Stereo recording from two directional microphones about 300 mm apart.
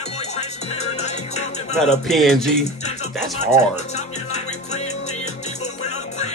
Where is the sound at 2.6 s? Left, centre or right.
Left.